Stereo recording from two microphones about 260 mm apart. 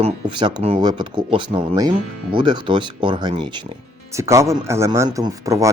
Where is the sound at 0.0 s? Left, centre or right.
Centre.